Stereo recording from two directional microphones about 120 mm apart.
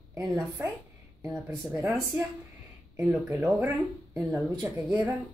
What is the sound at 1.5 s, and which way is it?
Speech, 20° right (ahead or behind).